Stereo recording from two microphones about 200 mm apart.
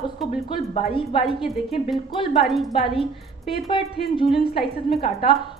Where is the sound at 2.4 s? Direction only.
Centre (ahead or behind).